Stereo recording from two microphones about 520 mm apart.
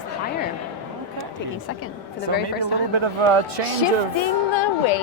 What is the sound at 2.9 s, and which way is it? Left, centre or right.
Speech, right.